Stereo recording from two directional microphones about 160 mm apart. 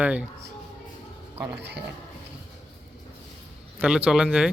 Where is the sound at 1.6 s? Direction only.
90° right.